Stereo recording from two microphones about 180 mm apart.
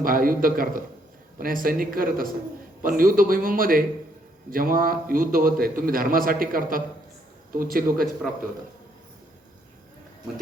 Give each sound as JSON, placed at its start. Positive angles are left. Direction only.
{"t": 0.0, "sound": "a man's voice", "side_deg": -50}